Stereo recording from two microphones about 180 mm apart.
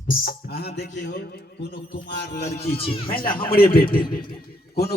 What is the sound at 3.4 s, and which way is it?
Speech, 30° left (ahead or behind).